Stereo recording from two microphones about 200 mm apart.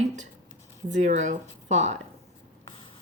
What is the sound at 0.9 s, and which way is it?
Speech, 35° right (ahead or behind).